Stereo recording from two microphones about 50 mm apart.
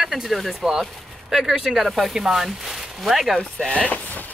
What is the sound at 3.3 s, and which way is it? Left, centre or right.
Speech, centre.